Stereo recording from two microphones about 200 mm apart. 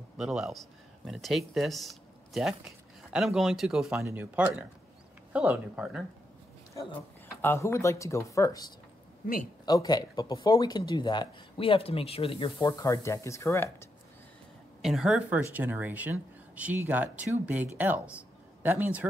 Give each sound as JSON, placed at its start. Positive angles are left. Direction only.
{"t": 0.2, "sound": "speech", "side_deg": 0}
{"t": 7.4, "sound": "speech", "side_deg": 15}
{"t": 9.7, "sound": "speech", "side_deg": 20}
{"t": 14.8, "sound": "speech", "side_deg": 0}